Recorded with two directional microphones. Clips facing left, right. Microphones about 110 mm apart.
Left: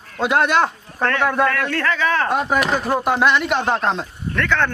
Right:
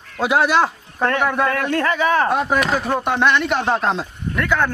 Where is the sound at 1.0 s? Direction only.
15° right (ahead or behind).